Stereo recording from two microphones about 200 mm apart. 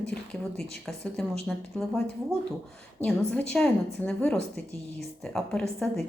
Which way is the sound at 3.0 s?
5° left (ahead or behind).